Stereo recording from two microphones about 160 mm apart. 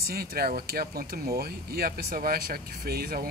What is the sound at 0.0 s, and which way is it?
Speech, 70° right (ahead or behind).